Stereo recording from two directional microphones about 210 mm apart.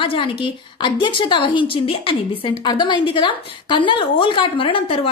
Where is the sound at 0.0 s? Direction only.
25° left (ahead or behind).